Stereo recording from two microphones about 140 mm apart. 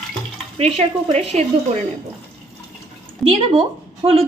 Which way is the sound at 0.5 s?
45° right (ahead or behind).